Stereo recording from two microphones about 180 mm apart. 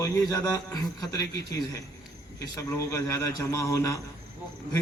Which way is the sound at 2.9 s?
15° left (ahead or behind).